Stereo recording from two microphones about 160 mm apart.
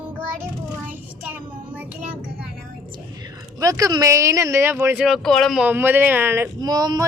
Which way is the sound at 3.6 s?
20° right (ahead or behind).